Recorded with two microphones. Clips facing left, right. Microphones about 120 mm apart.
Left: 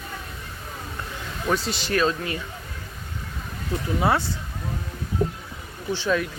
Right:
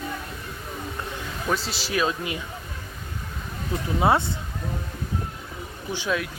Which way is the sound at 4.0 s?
25° right (ahead or behind).